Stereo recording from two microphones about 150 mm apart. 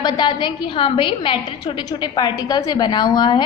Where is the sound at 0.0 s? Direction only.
30° left (ahead or behind).